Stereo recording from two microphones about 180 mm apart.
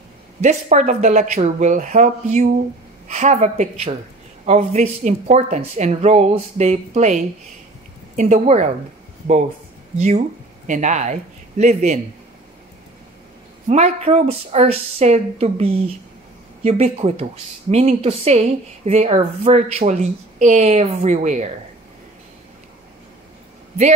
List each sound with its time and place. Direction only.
0.4 s speech: 40° right (ahead or behind)
9.9 s speech: 40° right (ahead or behind)
13.7 s speech: 40° right (ahead or behind)